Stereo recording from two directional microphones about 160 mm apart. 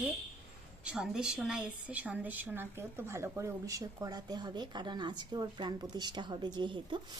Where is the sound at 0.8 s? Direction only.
5° right (ahead or behind); by 7.0 s 30° right (ahead or behind).